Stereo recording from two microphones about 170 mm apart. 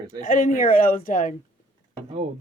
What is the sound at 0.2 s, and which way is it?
Speech, 50° left (ahead or behind).